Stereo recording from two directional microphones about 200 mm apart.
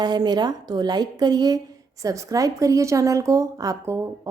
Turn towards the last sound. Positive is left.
turn(degrees=-15)  # may be behind; listen again after turning